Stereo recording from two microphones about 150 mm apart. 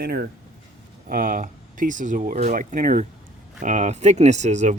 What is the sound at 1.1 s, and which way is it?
Speech, 65° right (ahead or behind).